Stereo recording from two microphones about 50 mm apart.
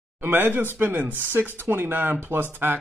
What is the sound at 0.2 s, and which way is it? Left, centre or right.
A man's voice, right.